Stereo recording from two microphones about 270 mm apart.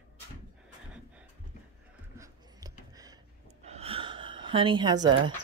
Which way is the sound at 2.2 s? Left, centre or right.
Centre.